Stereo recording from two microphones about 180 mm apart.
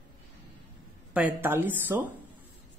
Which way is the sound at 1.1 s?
10° right (ahead or behind).